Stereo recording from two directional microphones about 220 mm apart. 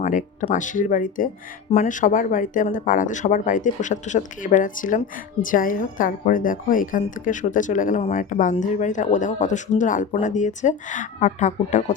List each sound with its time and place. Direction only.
0.0 s speech: 35° left (ahead or behind)